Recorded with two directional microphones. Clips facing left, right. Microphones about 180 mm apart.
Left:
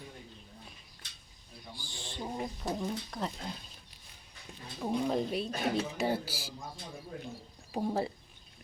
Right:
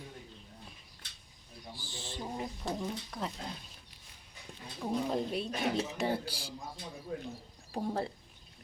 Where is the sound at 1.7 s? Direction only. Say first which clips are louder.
Right 1 dB; 5° right (ahead or behind).